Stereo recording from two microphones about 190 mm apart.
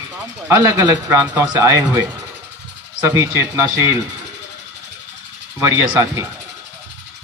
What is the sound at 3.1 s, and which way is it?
Speech, 15° right (ahead or behind).